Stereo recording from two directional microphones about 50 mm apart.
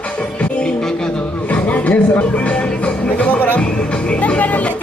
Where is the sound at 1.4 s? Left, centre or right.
Left.